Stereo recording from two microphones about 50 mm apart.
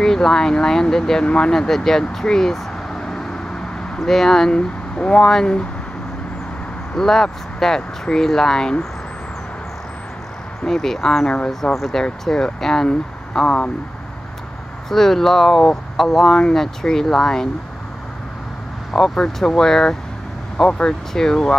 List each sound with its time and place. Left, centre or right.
0.0 s speech: centre
4.0 s speech: centre
4.6 s speech: left
7.0 s speech: centre
10.6 s speech: centre
12.0 s speech: centre
14.9 s speech: centre
18.9 s speech: centre